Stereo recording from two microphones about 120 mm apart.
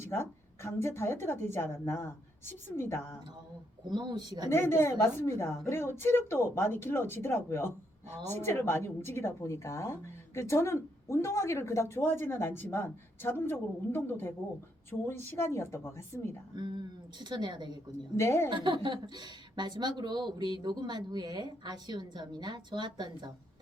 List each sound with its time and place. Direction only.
0.0 s a woman's voice: 20° left (ahead or behind)
3.8 s a woman's voice: 35° right (ahead or behind)
4.4 s a woman's voice: 20° left (ahead or behind)
16.6 s a woman's voice: 40° right (ahead or behind)
18.2 s a woman's voice: 20° left (ahead or behind)
18.5 s a woman's voice: 40° right (ahead or behind)